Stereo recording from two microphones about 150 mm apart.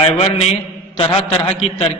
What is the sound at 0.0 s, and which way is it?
A man's voice, 35° left (ahead or behind).